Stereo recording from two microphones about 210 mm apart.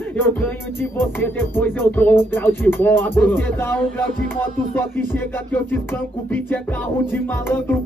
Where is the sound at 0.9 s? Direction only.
10° left (ahead or behind).